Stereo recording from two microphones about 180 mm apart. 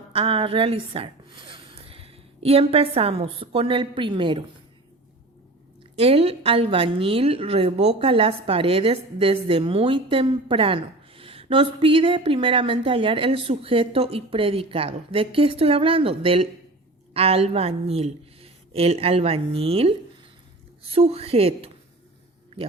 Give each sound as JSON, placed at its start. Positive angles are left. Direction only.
{"t": 0.1, "sound": "a woman's voice", "side_deg": -30}
{"t": 6.0, "sound": "a woman's voice", "side_deg": -35}